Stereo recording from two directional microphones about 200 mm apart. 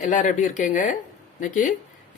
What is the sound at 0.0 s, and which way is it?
Speech, 40° left (ahead or behind).